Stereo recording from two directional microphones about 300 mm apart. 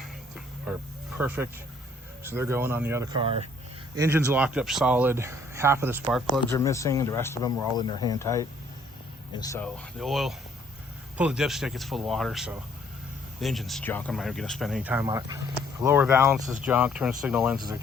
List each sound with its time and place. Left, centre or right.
0.0 s a sound: centre
1.2 s speech: centre
6.5 s speech: centre